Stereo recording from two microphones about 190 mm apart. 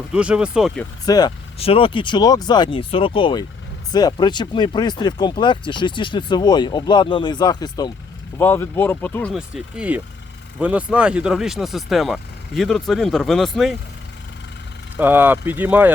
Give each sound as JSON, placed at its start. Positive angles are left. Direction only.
{"t": 0.1, "sound": "speech", "side_deg": -5}
{"t": 1.0, "sound": "speech", "side_deg": 20}
{"t": 1.5, "sound": "speech", "side_deg": 30}
{"t": 9.3, "sound": "speech", "side_deg": -5}
{"t": 14.9, "sound": "speech", "side_deg": -10}